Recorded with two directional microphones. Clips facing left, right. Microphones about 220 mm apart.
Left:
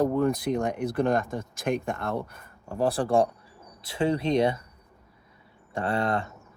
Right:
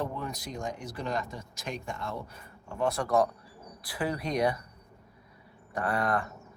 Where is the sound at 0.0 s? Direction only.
50° left (ahead or behind).